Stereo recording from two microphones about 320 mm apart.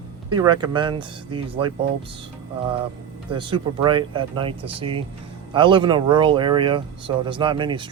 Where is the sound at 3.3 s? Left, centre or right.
Centre.